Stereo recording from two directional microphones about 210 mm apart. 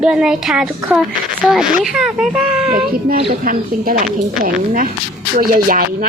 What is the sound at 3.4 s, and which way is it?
Speech, 45° right (ahead or behind).